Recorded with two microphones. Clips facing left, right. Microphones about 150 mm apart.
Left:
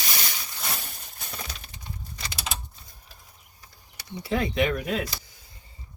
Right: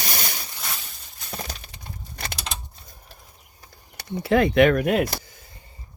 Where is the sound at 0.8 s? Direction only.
55° left (ahead or behind).